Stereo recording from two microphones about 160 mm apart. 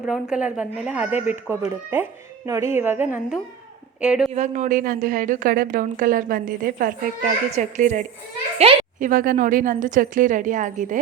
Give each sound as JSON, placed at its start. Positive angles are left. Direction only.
{"t": 0.0, "sound": "speech", "side_deg": -5}
{"t": 4.4, "sound": "a woman's voice", "side_deg": -50}
{"t": 8.6, "sound": "a child's voice", "side_deg": -35}
{"t": 9.0, "sound": "a woman's voice", "side_deg": -55}